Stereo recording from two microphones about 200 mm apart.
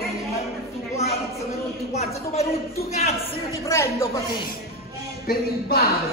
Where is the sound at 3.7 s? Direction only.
15° left (ahead or behind).